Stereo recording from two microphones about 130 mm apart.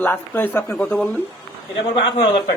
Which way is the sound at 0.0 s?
15° left (ahead or behind).